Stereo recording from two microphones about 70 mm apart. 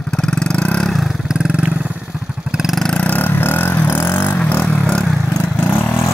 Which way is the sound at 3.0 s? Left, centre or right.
Left.